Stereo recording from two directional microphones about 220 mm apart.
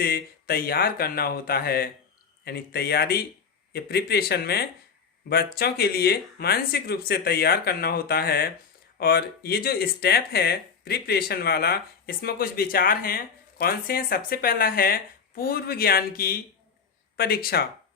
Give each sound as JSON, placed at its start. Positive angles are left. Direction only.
{"t": 0.0, "sound": "speech", "side_deg": 45}